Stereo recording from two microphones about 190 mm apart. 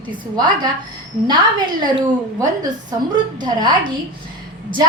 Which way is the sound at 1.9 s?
20° right (ahead or behind).